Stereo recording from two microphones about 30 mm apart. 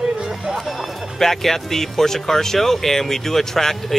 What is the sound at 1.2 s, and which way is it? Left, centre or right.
Speech, centre.